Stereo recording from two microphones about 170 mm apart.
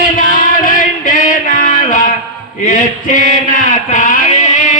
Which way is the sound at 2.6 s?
50° left (ahead or behind).